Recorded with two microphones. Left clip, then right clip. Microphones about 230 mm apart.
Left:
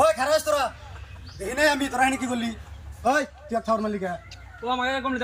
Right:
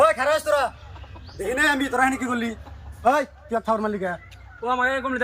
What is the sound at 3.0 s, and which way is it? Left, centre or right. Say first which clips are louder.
A man's voice: right 3 dB; centre.